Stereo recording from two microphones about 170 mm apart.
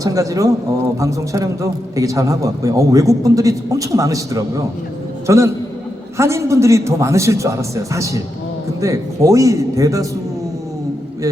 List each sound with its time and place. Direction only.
0.0 s a man's voice: 20° right (ahead or behind)